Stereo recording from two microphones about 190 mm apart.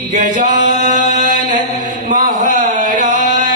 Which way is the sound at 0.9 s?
40° right (ahead or behind).